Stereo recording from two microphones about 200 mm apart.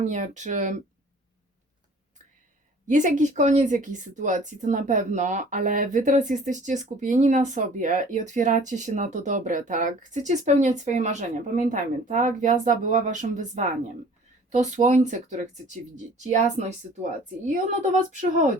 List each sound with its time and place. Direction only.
0.0 s speech: 35° right (ahead or behind)
2.8 s speech: 40° right (ahead or behind)
18.2 s speech: 40° right (ahead or behind)